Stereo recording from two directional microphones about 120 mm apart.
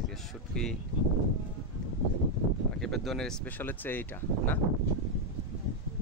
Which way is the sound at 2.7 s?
5° left (ahead or behind).